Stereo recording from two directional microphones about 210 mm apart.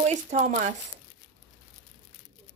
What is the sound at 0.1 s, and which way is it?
Speech, 35° right (ahead or behind).